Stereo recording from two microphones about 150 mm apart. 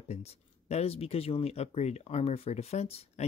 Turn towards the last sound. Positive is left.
turn(degrees=45)  # may be behind; listen again after turning